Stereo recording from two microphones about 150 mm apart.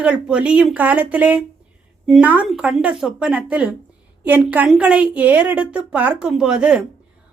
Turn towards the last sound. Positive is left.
turn(degrees=-5)  # may be behind; listen again after turning